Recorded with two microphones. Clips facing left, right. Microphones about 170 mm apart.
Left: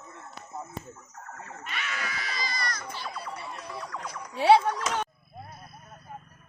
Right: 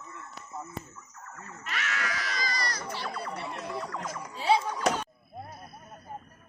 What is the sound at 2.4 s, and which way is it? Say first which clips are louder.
Baby cry: left 1 dB; 35° right (ahead or behind).